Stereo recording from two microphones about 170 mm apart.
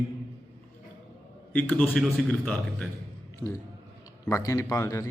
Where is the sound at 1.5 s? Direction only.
10° left (ahead or behind).